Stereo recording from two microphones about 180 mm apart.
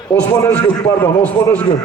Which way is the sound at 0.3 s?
15° left (ahead or behind).